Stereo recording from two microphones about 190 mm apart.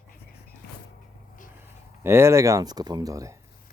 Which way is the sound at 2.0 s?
15° right (ahead or behind).